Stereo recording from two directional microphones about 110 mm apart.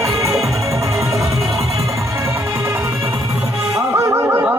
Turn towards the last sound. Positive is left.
turn(degrees=-20)  # may be behind; listen again after turning